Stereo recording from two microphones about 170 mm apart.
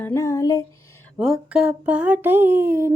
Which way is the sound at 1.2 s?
5° right (ahead or behind).